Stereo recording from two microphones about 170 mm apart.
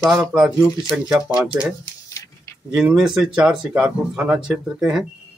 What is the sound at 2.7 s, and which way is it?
Speech, 5° right (ahead or behind).